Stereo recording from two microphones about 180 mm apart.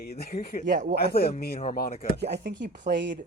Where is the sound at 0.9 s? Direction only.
60° left (ahead or behind).